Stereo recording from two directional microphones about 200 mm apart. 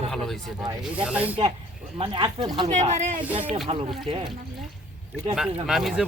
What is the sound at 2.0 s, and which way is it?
A woman's voice, 25° right (ahead or behind).